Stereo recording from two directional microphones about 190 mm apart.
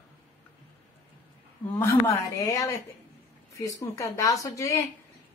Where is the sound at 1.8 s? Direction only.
15° left (ahead or behind).